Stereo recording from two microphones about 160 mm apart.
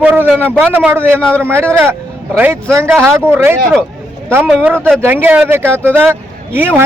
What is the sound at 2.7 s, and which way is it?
Speech, 15° right (ahead or behind).